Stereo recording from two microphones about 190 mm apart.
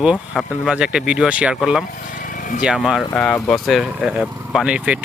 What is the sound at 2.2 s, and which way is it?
Vehicle, 45° left (ahead or behind).